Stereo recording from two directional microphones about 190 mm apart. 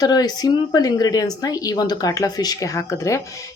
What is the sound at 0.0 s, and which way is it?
Speech, 20° left (ahead or behind).